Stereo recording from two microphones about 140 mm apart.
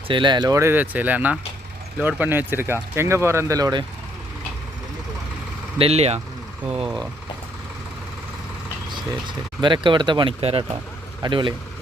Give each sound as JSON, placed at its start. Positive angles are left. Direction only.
{"t": 0.1, "sound": "speech", "side_deg": -35}
{"t": 5.8, "sound": "speech", "side_deg": -50}
{"t": 8.9, "sound": "speech", "side_deg": -35}